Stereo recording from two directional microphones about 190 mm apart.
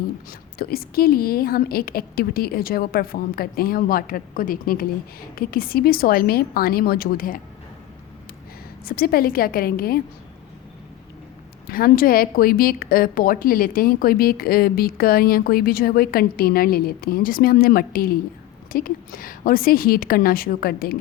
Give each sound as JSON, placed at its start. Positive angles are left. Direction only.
{"t": 0.3, "sound": "a woman's voice", "side_deg": 50}
{"t": 8.8, "sound": "a woman's voice", "side_deg": 50}
{"t": 11.7, "sound": "a woman's voice", "side_deg": 50}